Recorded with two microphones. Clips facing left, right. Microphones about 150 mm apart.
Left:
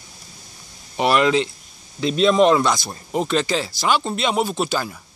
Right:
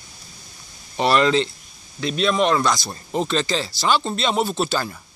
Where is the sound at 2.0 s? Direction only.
25° left (ahead or behind).